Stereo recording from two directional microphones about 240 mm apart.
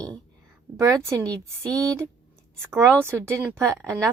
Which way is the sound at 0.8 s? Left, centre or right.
Centre.